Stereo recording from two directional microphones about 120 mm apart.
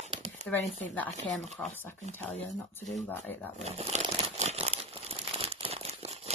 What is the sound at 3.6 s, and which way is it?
Crumpling, 60° right (ahead or behind).